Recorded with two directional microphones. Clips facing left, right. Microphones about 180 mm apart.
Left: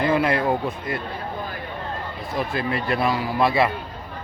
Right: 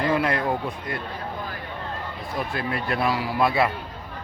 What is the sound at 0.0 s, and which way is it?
Speech, 5° left (ahead or behind).